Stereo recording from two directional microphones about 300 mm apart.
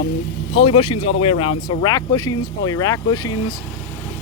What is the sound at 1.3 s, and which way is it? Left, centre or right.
Speech, left.